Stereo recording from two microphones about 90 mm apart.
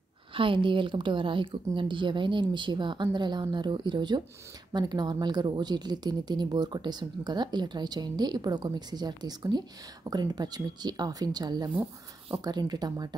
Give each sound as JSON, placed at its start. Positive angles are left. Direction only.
{"t": 0.3, "sound": "a woman's voice", "side_deg": -70}